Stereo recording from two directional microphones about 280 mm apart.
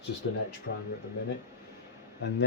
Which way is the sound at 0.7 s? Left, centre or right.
Left.